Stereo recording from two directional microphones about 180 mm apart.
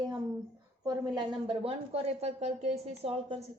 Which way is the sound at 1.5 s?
30° right (ahead or behind).